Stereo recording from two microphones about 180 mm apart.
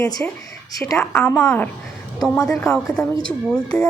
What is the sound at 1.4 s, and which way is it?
Speech, 15° left (ahead or behind).